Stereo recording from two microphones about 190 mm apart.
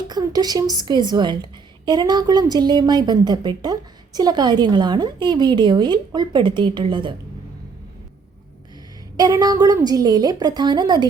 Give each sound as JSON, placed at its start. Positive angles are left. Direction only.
{"t": 0.1, "sound": "a woman's voice", "side_deg": -20}
{"t": 9.1, "sound": "a woman's voice", "side_deg": -20}